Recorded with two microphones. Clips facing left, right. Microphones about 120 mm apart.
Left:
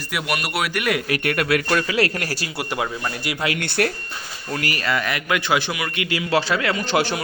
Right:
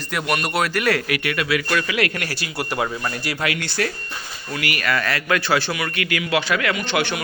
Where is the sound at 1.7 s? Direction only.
35° left (ahead or behind).